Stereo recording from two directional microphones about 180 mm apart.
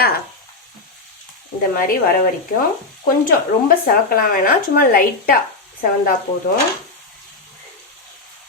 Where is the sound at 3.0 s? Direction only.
50° left (ahead or behind).